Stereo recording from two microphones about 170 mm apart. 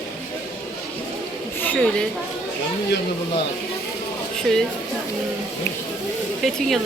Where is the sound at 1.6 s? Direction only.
10° left (ahead or behind).